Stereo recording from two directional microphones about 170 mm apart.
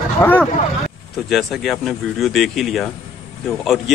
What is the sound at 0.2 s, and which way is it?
Speech, 10° left (ahead or behind).